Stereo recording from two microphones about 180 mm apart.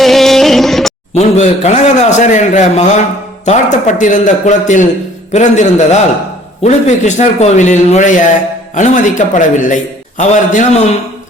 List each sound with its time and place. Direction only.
0.0 s music: centre (ahead or behind)
1.1 s a man's voice: 40° left (ahead or behind)